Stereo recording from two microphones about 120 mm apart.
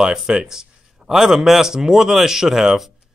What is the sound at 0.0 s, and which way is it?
Speech, 5° right (ahead or behind).